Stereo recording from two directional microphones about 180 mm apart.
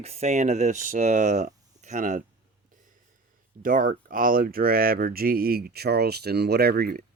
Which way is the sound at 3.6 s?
50° right (ahead or behind).